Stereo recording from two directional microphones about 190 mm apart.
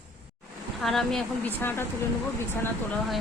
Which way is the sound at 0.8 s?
Centre (ahead or behind).